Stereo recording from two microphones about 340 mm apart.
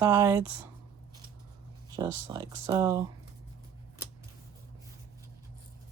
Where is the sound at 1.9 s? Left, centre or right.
Centre.